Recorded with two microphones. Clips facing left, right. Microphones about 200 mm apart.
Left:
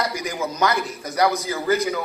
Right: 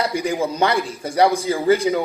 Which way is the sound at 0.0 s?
30° right (ahead or behind).